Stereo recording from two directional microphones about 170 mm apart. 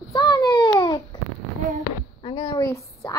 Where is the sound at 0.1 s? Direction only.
25° left (ahead or behind).